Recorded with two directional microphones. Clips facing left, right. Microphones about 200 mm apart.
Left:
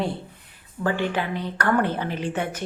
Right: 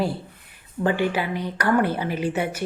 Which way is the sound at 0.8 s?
20° right (ahead or behind).